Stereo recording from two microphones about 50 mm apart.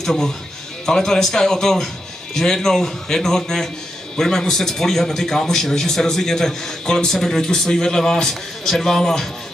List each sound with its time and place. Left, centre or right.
0.0 s a man's voice: centre